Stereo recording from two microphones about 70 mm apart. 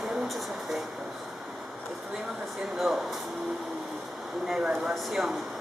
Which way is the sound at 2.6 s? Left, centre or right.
Centre.